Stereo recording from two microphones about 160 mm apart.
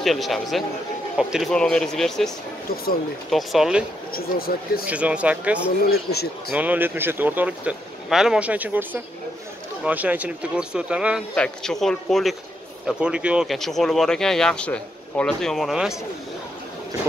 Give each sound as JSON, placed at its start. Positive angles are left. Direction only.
{"t": 0.0, "sound": "speech", "side_deg": 0}
{"t": 4.1, "sound": "speech", "side_deg": 70}
{"t": 4.8, "sound": "speech", "side_deg": -10}
{"t": 11.3, "sound": "speech", "side_deg": 5}